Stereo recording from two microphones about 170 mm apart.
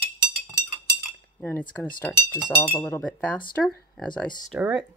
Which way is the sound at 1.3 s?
10° left (ahead or behind).